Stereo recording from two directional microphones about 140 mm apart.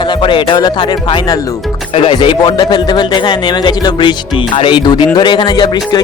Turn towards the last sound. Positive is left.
turn(degrees=30)  # may be behind; listen again after turning